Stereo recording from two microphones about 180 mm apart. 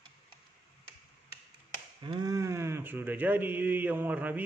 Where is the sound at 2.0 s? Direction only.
20° right (ahead or behind).